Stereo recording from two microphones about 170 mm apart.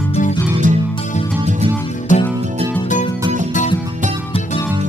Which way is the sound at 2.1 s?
50° left (ahead or behind).